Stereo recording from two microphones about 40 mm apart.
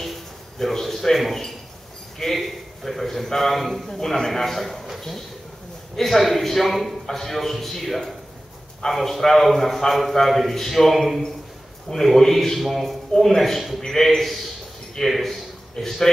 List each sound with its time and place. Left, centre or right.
0.0 s a sound: centre
3.3 s a man's voice: centre
3.9 s a man's voice: centre
13.1 s speech: centre
13.4 s a man's voice: centre